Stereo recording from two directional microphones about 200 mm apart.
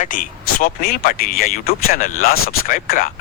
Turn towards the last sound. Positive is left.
turn(degrees=45)  # may be behind; listen again after turning